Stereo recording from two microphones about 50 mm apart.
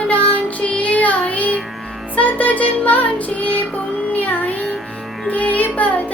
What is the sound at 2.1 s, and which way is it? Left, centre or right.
Music, left.